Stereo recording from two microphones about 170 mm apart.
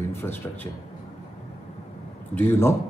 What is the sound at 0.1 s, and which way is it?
Speech, 15° left (ahead or behind).